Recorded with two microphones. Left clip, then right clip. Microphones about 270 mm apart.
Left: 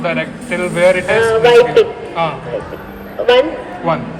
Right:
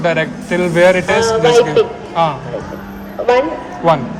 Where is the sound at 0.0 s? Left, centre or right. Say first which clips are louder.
Right 3 dB; right.